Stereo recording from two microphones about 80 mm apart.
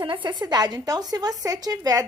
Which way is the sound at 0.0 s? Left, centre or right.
Right.